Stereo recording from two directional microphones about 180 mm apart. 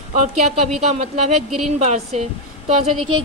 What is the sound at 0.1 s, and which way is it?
Speech, 40° right (ahead or behind).